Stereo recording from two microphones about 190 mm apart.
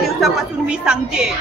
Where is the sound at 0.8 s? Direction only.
5° right (ahead or behind).